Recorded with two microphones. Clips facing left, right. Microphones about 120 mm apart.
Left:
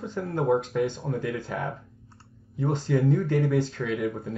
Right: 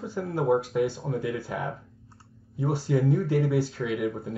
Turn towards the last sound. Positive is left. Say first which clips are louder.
# even
turn(degrees=-5)  # may be behind; listen again after turning